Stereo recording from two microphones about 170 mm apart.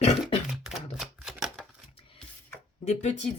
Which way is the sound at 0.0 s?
40° left (ahead or behind).